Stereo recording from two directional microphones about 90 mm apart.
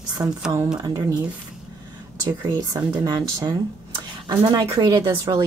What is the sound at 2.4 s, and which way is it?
Speech, 45° right (ahead or behind).